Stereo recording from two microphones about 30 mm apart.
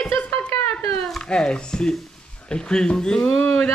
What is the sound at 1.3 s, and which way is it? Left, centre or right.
Speech, left.